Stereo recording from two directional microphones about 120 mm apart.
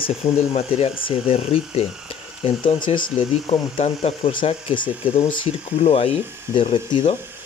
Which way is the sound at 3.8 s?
55° left (ahead or behind).